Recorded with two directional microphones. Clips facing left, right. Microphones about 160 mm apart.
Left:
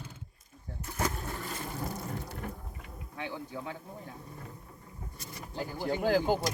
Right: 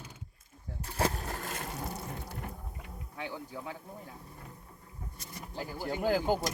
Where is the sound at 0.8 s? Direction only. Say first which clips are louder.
Right 2 dB; 30° right (ahead or behind).